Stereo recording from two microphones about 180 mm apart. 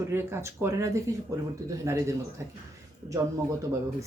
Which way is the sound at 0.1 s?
15° right (ahead or behind).